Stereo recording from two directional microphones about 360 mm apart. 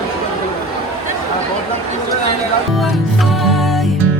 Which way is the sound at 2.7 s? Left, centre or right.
Centre.